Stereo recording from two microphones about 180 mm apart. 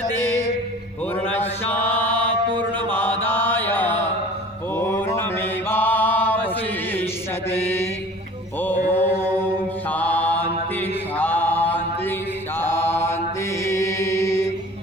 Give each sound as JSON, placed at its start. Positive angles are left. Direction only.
{"t": 1.3, "sound": "mantra", "side_deg": 10}
{"t": 8.9, "sound": "mantra", "side_deg": 10}
{"t": 13.7, "sound": "chant", "side_deg": 15}